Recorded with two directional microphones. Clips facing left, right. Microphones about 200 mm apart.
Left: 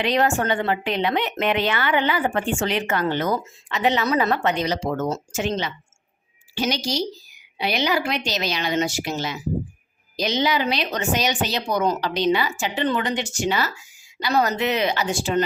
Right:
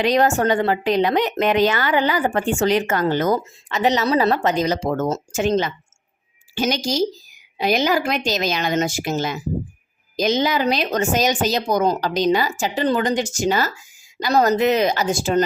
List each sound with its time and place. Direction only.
0.0 s speech: 40° right (ahead or behind)